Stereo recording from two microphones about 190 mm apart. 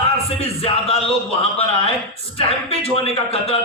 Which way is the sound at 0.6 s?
30° left (ahead or behind).